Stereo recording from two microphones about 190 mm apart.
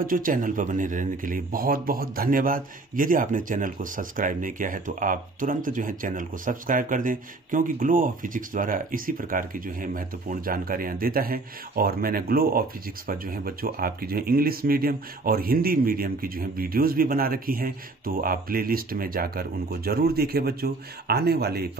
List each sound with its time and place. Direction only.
0.0 s speech: 45° right (ahead or behind)